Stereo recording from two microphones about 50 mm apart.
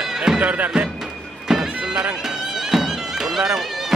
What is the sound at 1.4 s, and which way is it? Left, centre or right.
Bagpipes, centre.